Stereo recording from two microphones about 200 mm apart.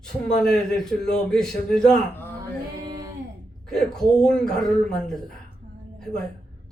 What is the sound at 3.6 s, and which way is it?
A man's voice, 5° left (ahead or behind).